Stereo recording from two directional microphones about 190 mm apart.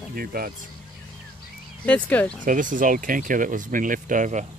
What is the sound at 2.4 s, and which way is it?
Speech, 45° right (ahead or behind).